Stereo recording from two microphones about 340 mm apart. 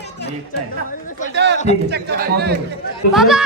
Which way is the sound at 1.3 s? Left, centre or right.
Right.